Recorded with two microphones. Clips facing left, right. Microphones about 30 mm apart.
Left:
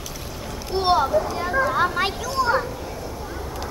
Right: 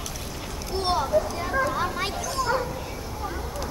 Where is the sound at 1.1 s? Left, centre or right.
Centre.